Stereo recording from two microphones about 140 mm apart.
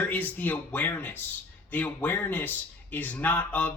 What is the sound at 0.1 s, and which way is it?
Speech, 10° left (ahead or behind).